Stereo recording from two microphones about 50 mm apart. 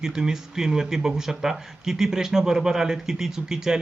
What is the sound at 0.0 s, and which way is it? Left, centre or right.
A man's voice, centre.